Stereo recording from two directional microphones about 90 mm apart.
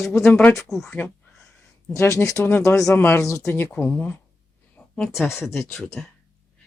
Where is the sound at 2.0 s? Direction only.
35° left (ahead or behind).